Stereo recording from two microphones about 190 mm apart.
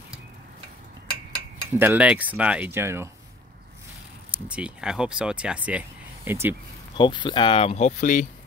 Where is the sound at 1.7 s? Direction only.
10° right (ahead or behind).